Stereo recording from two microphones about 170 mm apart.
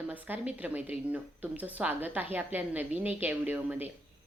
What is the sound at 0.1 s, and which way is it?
Speech, 10° right (ahead or behind).